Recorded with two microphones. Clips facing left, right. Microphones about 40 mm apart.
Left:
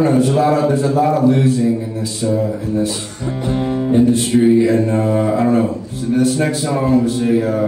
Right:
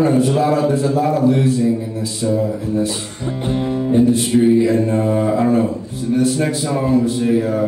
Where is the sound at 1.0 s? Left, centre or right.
Centre.